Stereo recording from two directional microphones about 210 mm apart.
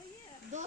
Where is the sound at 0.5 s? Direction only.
35° right (ahead or behind).